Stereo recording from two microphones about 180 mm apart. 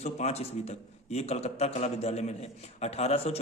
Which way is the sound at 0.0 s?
40° left (ahead or behind).